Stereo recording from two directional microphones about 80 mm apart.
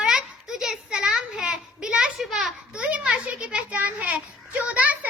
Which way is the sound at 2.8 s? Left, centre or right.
Centre.